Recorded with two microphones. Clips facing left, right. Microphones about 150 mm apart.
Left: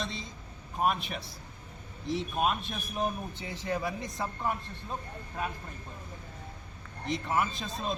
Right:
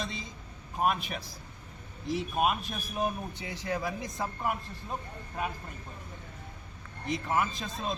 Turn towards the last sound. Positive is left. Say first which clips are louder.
# even
turn(degrees=0)  # may be behind; listen again after turning